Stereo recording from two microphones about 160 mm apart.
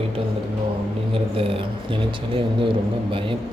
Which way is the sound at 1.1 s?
35° right (ahead or behind).